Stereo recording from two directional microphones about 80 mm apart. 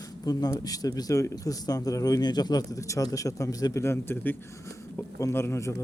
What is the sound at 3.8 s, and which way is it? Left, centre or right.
Speech, left.